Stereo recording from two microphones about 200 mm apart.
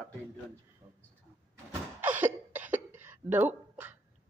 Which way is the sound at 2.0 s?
10° right (ahead or behind).